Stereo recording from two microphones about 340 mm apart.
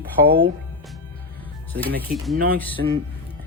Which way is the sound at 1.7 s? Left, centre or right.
Right.